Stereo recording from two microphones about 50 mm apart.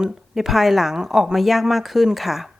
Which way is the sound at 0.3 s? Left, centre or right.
Centre.